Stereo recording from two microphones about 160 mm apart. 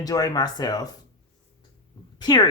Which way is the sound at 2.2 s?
25° left (ahead or behind).